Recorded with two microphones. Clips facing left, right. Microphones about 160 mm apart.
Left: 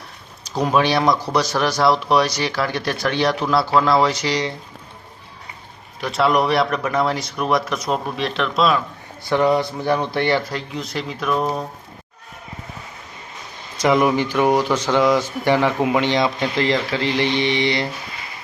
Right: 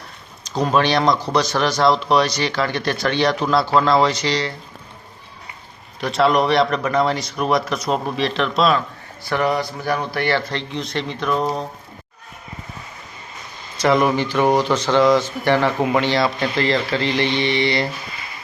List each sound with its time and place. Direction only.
0.4 s speech: 5° left (ahead or behind)
6.1 s speech: centre (ahead or behind)
9.3 s speech: 20° left (ahead or behind)
10.5 s speech: 5° left (ahead or behind)
13.7 s speech: 15° left (ahead or behind)